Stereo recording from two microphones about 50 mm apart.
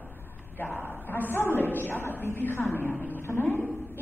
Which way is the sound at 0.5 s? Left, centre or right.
Left.